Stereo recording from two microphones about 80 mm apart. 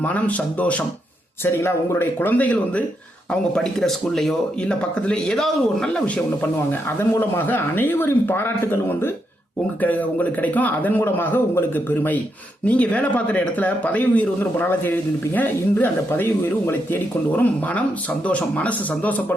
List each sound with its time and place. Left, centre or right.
0.0 s speech: centre
1.5 s speech: left
3.5 s speech: centre
6.4 s speech: left